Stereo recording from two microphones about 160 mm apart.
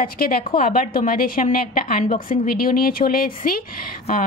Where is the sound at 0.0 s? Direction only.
65° left (ahead or behind).